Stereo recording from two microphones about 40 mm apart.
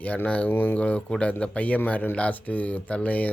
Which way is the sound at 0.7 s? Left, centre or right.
Left.